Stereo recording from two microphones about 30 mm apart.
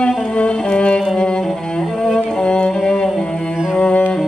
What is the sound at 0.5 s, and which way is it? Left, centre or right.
Music, left.